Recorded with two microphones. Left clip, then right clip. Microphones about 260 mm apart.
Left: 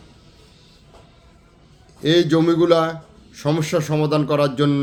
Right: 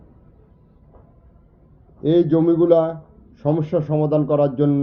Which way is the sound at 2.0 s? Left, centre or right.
Centre.